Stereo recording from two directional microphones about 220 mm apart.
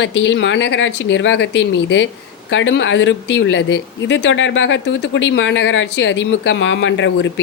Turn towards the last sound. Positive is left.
turn(degrees=55)  # may be behind; listen again after turning